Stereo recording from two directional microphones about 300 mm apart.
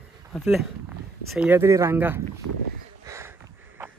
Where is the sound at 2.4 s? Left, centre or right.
Right.